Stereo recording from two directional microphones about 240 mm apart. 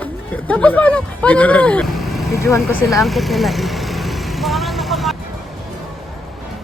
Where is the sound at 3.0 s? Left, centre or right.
Centre.